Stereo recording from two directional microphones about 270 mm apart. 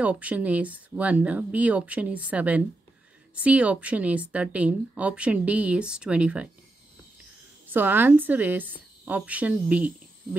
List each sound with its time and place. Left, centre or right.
0.0 s a woman's voice: centre
7.6 s a woman's voice: centre